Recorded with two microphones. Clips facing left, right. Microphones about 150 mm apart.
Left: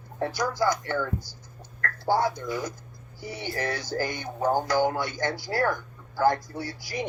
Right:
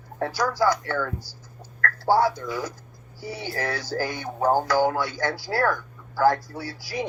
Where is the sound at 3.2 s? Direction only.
10° right (ahead or behind).